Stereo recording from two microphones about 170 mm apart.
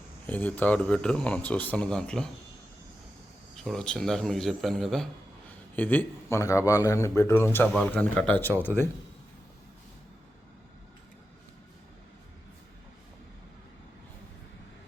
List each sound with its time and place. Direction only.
0.3 s speech: 10° left (ahead or behind)
3.5 s speech: centre (ahead or behind)